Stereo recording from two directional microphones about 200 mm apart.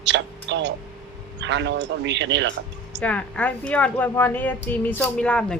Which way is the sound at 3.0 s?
5° left (ahead or behind).